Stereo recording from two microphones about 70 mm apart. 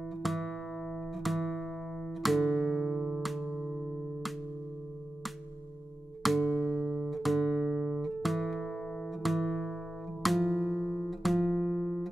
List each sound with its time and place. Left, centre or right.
0.2 s music: centre
6.2 s music: centre
6.8 s music: centre
7.1 s music: centre